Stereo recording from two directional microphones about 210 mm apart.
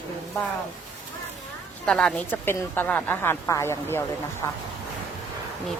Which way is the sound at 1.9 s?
5° left (ahead or behind).